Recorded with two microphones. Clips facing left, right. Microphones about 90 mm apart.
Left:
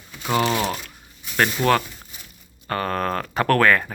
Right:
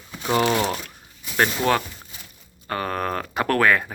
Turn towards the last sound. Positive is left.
turn(degrees=-15)  # may be behind; listen again after turning